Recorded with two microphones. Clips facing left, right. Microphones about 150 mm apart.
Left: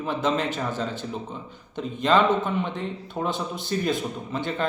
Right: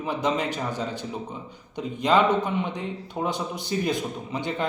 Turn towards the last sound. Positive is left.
turn(degrees=-15)  # may be behind; listen again after turning